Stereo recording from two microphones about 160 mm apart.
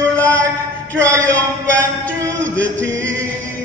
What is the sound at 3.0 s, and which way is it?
A capella, 10° left (ahead or behind).